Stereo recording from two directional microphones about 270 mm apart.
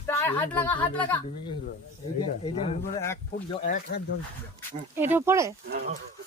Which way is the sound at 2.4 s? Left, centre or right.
Left.